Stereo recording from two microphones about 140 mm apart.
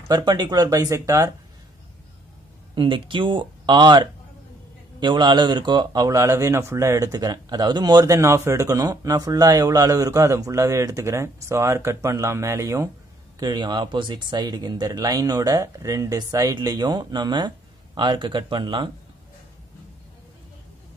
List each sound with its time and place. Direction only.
0.1 s speech: 30° right (ahead or behind)
2.7 s speech: 35° right (ahead or behind); by 12.9 s 20° right (ahead or behind)
13.4 s speech: 30° right (ahead or behind)